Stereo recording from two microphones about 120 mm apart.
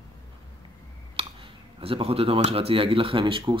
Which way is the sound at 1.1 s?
50° right (ahead or behind).